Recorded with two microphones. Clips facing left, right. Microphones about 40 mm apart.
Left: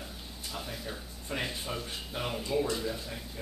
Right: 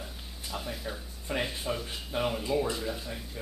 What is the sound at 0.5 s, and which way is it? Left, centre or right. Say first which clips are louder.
Speech: right 3 dB; centre.